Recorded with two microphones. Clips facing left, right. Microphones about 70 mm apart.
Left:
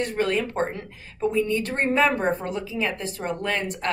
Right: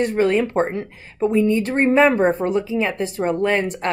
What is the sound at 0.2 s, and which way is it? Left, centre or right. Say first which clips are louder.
A woman's voice: right 6 dB; right.